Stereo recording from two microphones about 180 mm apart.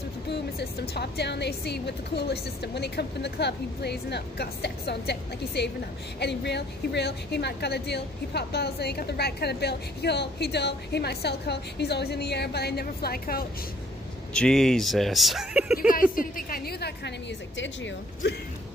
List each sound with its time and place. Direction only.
0.3 s a woman's voice: 65° left (ahead or behind)
14.3 s speech: 5° left (ahead or behind)
15.9 s a woman's voice: 50° left (ahead or behind)
17.6 s a woman's voice: 90° left